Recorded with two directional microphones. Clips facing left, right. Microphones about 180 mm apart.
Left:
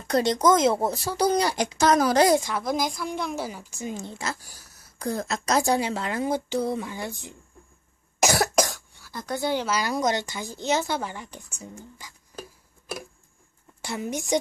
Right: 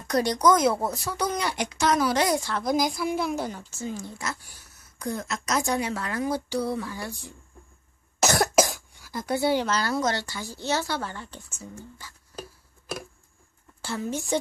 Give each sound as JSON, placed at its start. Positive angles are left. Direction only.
{"t": 0.0, "sound": "speech", "side_deg": 25}
{"t": 2.6, "sound": "speech", "side_deg": 0}
{"t": 8.2, "sound": "cough", "side_deg": 10}
{"t": 8.5, "sound": "cough", "side_deg": -10}
{"t": 9.7, "sound": "speech", "side_deg": 15}
{"t": 13.7, "sound": "a child's voice", "side_deg": 15}